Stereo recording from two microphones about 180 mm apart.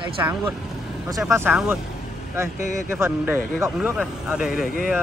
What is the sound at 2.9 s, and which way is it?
Speech, 10° right (ahead or behind).